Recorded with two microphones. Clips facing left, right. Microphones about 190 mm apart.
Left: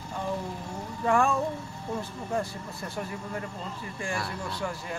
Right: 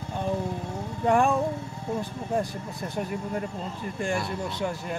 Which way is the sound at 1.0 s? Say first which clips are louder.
Right 3 dB; 20° right (ahead or behind).